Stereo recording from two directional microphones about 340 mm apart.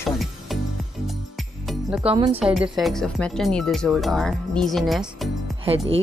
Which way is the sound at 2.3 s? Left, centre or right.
Centre.